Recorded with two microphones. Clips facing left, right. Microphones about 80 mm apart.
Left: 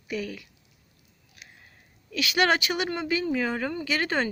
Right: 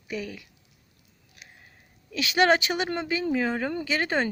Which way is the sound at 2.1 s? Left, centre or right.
Right.